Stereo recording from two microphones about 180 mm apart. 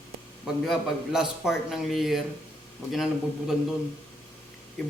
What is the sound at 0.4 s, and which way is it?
A man's voice, centre (ahead or behind).